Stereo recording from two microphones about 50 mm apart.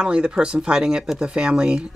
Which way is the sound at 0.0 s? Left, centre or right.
Centre.